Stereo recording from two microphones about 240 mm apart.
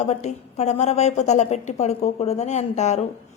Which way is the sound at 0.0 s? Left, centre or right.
Left.